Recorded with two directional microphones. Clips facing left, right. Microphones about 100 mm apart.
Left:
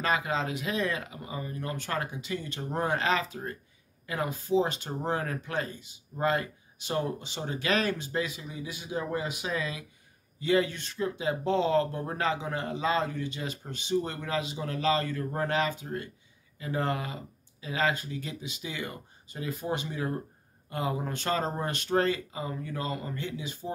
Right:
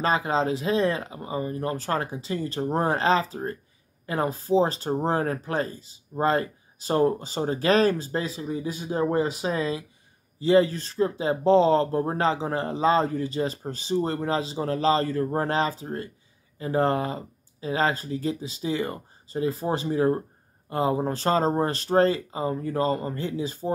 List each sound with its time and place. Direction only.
0.0 s speech: 30° right (ahead or behind)